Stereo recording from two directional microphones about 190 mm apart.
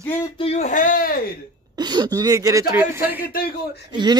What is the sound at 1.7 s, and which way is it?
Speech, 20° right (ahead or behind).